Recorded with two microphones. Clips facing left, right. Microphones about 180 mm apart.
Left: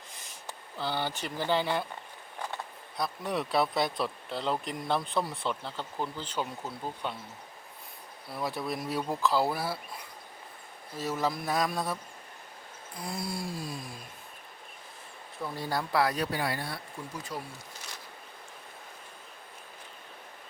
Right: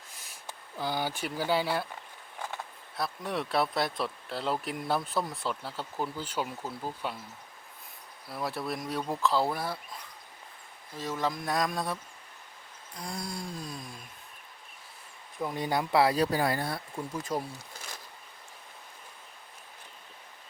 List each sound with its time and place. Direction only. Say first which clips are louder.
0.3 s speech: left 1 dB; 10° right (ahead or behind)
3.0 s speech: left 1 dB; centre (ahead or behind)
8.3 s speech: even; centre (ahead or behind)
10.9 s speech: left 1 dB; 5° left (ahead or behind)
13.0 s a sound: left 2 dB; 5° left (ahead or behind)
15.4 s speech: right 3 dB; 20° right (ahead or behind); by 17.5 s 45° right (ahead or behind)